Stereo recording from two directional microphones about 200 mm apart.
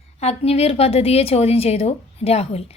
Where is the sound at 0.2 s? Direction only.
30° left (ahead or behind).